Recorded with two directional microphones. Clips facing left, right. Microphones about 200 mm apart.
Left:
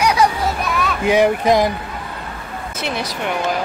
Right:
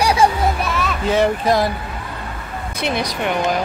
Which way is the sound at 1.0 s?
15° left (ahead or behind).